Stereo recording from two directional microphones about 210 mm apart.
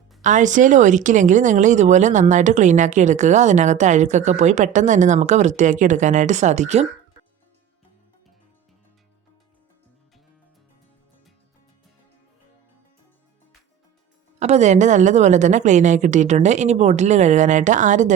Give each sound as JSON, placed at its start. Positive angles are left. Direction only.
{"t": 0.2, "sound": "a woman's voice", "side_deg": -35}
{"t": 14.3, "sound": "a woman's voice", "side_deg": -30}